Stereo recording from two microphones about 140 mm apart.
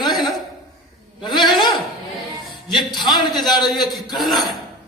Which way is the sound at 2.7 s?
Centre (ahead or behind).